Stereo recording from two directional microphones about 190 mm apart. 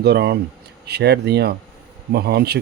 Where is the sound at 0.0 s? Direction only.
60° right (ahead or behind).